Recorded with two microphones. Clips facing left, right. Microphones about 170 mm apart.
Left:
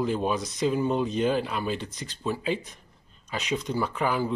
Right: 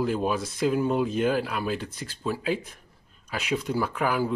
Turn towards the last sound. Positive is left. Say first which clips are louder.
# right 1 dB
turn(degrees=-5)  # may be behind; listen again after turning